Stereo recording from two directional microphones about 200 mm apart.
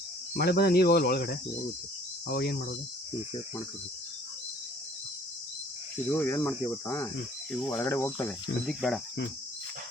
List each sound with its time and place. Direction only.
0.3 s cricket: 50° left (ahead or behind)
6.1 s speech: 10° left (ahead or behind)